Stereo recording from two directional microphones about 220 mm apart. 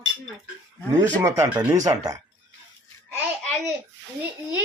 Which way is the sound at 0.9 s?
15° right (ahead or behind).